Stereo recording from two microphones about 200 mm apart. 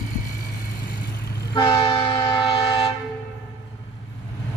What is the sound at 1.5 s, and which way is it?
Train, 25° left (ahead or behind).